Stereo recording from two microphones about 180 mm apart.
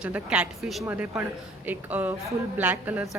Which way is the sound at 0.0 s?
5° right (ahead or behind).